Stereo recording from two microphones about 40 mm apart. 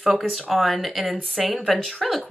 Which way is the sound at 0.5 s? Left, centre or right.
Centre.